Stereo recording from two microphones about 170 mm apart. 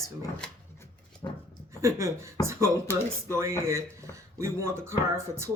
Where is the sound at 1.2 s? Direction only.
25° left (ahead or behind).